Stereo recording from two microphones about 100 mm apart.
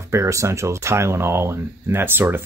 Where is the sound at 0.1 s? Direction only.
30° right (ahead or behind).